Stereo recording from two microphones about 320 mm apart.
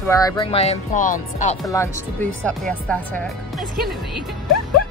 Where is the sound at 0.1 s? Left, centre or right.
Centre.